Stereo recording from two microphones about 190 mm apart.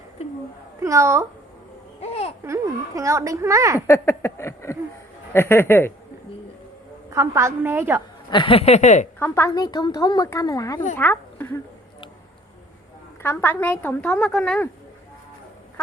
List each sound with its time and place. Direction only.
0.8 s speech: 15° right (ahead or behind)
2.0 s babbling: 30° left (ahead or behind)
2.4 s speech: 15° right (ahead or behind)
3.8 s a woman's voice: 15° left (ahead or behind)
7.1 s speech: 15° right (ahead or behind)
8.3 s speech: 25° left (ahead or behind)
9.1 s a woman's voice: 10° left (ahead or behind)
13.2 s a woman's voice: 10° left (ahead or behind)